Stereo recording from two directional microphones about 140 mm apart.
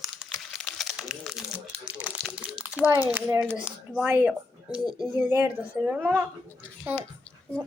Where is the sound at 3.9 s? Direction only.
10° right (ahead or behind).